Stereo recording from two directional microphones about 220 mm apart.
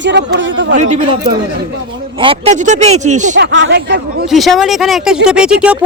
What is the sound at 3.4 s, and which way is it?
Speech, 55° right (ahead or behind).